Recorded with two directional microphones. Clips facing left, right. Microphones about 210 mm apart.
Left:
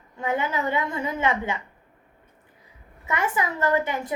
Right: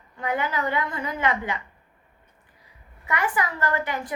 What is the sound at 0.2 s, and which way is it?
A woman's voice, 25° left (ahead or behind).